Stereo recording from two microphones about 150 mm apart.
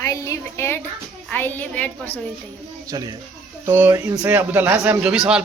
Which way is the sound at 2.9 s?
25° right (ahead or behind).